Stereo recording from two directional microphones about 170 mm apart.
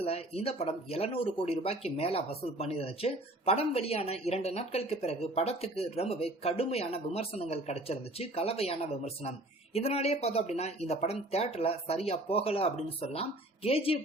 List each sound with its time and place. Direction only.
0.0 s speech: 35° left (ahead or behind)